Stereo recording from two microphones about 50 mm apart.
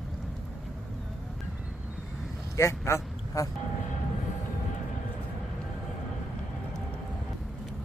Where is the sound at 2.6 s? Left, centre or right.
Left.